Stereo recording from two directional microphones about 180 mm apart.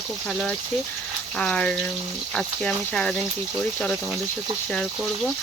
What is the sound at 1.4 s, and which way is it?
Speech, 5° left (ahead or behind).